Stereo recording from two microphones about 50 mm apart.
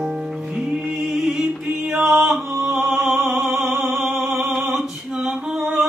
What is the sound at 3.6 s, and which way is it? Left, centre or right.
Music, centre.